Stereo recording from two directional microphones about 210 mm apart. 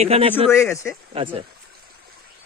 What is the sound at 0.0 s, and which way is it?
Speech, 30° right (ahead or behind).